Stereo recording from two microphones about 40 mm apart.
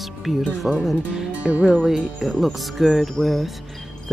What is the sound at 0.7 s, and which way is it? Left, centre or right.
Speech, centre.